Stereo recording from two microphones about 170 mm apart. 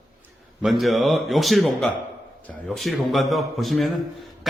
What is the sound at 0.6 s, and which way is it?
A man's voice, centre (ahead or behind).